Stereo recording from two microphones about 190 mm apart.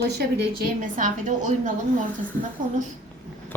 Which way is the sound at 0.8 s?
40° right (ahead or behind).